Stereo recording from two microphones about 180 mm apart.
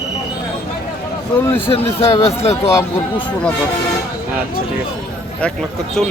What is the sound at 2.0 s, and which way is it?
Speech, 35° left (ahead or behind).